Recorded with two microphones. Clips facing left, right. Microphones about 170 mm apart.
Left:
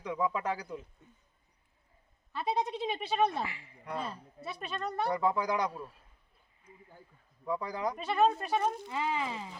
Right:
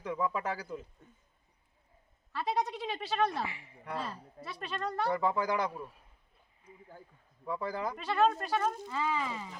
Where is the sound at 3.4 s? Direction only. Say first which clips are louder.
Even; 20° right (ahead or behind).